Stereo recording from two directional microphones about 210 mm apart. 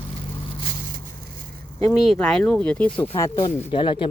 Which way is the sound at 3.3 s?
25° left (ahead or behind).